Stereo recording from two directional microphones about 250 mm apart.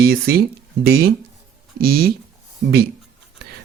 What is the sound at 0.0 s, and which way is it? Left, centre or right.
Speech, right.